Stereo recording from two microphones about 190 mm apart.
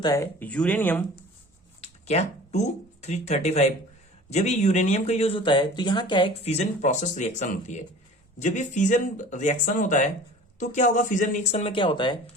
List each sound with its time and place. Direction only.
0.0 s speech: 15° left (ahead or behind)
1.8 s speech: 35° left (ahead or behind)